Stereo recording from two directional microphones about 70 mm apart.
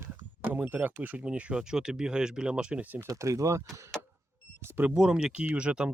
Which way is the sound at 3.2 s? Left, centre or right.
Right.